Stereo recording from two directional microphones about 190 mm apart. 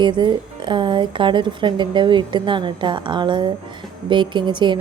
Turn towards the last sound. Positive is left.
turn(degrees=-25)  # may be behind; listen again after turning